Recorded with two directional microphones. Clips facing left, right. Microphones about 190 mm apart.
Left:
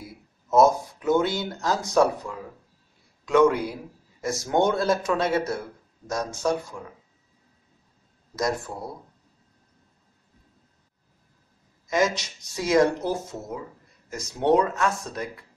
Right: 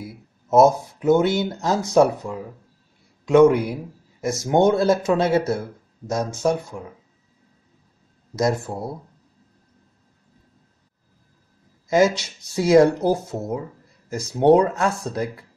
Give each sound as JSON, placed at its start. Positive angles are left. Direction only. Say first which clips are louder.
{"t": 0.5, "sound": "speech", "louder": "right 3 dB", "side_deg": -25}
{"t": 8.4, "sound": "speech", "louder": "right 5 dB", "side_deg": -25}
{"t": 11.9, "sound": "speech", "louder": "right 6 dB", "side_deg": -30}